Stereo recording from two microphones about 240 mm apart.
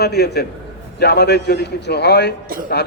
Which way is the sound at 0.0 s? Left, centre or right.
Left.